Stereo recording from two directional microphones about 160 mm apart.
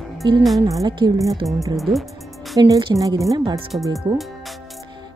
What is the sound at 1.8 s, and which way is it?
Music, centre (ahead or behind).